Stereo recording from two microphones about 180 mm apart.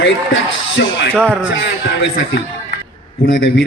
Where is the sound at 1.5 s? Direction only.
75° left (ahead or behind).